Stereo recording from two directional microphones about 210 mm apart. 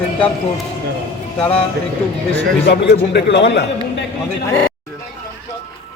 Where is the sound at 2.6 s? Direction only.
55° left (ahead or behind).